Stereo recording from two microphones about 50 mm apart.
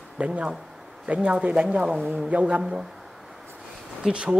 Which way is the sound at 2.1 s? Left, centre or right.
Right.